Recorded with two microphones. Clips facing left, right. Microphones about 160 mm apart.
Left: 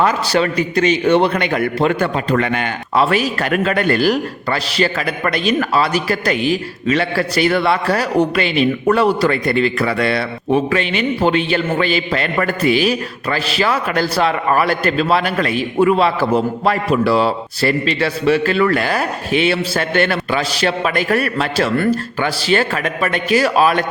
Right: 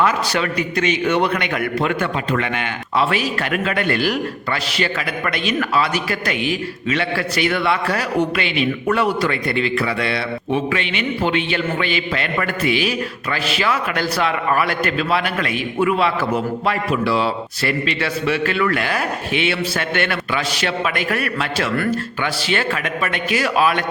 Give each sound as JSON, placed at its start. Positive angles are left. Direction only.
{"t": 0.0, "sound": "a man's voice", "side_deg": 35}